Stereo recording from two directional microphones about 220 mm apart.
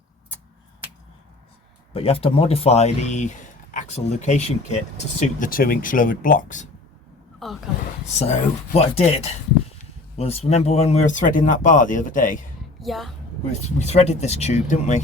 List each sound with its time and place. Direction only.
1.9 s speech: 25° left (ahead or behind)
7.4 s a woman's voice: centre (ahead or behind)
8.2 s speech: 30° left (ahead or behind)
12.8 s a woman's voice: centre (ahead or behind)
13.7 s speech: 30° left (ahead or behind)